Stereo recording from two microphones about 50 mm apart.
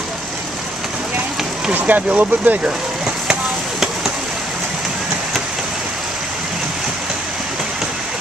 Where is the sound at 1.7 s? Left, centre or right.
Right.